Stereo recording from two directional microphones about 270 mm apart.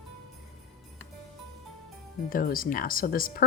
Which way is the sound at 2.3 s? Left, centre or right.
Left.